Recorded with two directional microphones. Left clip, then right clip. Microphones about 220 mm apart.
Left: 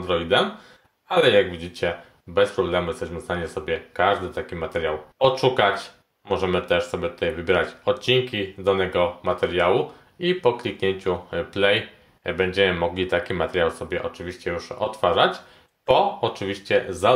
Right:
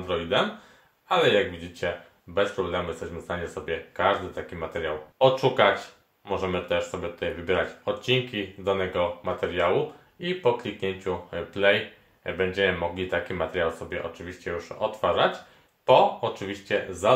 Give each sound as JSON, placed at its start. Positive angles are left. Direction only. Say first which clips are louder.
{"t": 0.0, "sound": "speech", "louder": "left 5 dB", "side_deg": 50}
{"t": 1.1, "sound": "speech", "louder": "left 3 dB", "side_deg": 0}
{"t": 1.6, "sound": "speech", "louder": "left 4 dB", "side_deg": 45}
{"t": 5.2, "sound": "speech", "louder": "left 1 dB", "side_deg": 0}
{"t": 5.6, "sound": "speech", "louder": "left 1 dB", "side_deg": 45}